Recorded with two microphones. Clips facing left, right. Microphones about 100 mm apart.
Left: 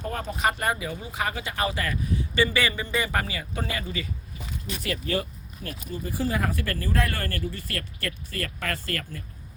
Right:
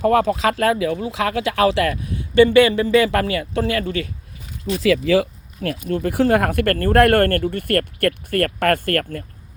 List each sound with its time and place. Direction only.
0.0 s speech: 90° right; by 4.1 s 70° right (ahead or behind)
4.8 s speech: 90° right; by 9.2 s 55° right (ahead or behind)